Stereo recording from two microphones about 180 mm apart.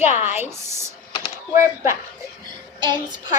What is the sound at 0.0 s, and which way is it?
Speech, 40° left (ahead or behind).